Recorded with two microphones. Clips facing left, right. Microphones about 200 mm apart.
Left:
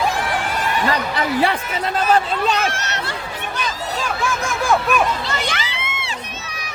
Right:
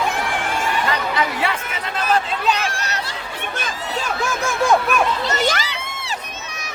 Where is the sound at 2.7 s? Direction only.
35° right (ahead or behind).